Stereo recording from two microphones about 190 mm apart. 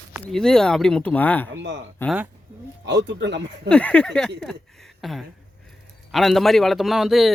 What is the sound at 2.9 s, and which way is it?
Speech, 65° right (ahead or behind).